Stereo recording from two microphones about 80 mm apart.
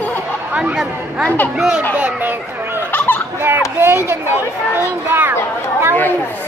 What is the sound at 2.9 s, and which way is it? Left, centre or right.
Turkey, left.